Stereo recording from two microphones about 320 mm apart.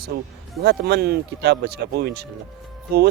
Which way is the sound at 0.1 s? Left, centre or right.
Right.